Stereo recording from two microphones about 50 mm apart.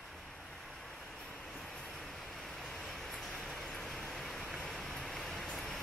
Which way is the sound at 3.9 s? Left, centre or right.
Centre.